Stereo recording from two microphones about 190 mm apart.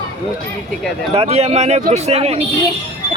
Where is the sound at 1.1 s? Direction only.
30° right (ahead or behind).